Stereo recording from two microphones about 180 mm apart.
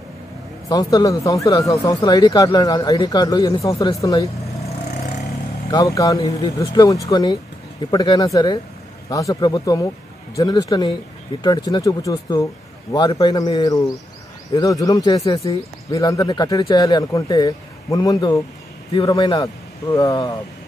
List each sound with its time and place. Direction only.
0.7 s speech: 20° left (ahead or behind)
5.7 s speech: 20° left (ahead or behind)